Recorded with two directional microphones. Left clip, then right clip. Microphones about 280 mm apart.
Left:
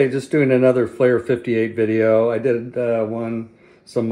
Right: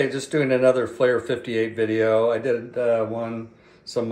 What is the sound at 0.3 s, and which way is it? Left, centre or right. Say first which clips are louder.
Speech: left 2 dB; left.